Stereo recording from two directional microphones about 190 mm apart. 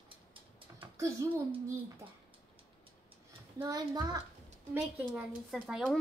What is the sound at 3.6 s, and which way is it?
Speech, 20° right (ahead or behind).